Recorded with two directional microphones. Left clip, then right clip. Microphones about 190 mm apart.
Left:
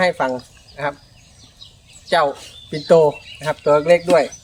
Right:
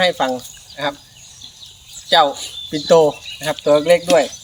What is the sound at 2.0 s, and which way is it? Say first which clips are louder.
Speech: right 3 dB; 10° left (ahead or behind).